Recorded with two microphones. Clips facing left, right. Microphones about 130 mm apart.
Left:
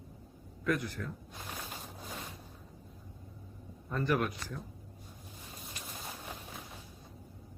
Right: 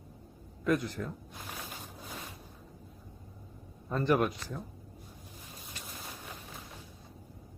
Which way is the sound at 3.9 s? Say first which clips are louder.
Right 4 dB; 25° right (ahead or behind).